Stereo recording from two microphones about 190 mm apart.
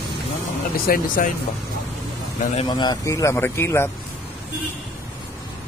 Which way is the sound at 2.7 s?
20° left (ahead or behind).